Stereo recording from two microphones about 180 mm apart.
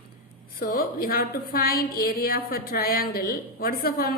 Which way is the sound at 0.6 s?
55° left (ahead or behind).